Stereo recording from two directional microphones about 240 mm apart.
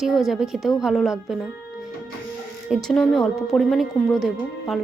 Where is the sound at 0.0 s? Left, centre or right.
Centre.